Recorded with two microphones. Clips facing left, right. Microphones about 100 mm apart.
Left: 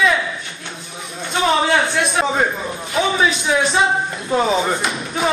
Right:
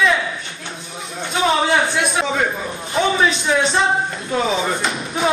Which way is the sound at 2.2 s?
35° left (ahead or behind).